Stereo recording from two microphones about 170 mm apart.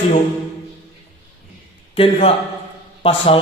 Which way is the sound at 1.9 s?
35° left (ahead or behind).